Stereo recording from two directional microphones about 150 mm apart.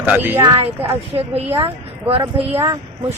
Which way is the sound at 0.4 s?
40° right (ahead or behind).